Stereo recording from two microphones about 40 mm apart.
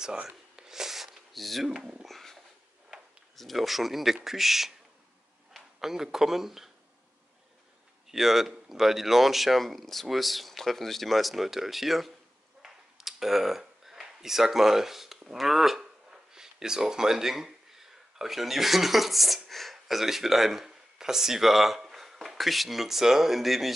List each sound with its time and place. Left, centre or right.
0.0 s speech: centre
0.6 s a sound: centre
1.8 s speech: right
2.0 s a sound: centre
3.3 s speech: centre
5.8 s speech: centre
8.1 s speech: centre
12.6 s a sound: centre
15.3 s speech: centre